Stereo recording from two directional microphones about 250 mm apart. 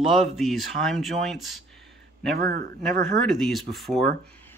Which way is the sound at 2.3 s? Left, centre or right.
Right.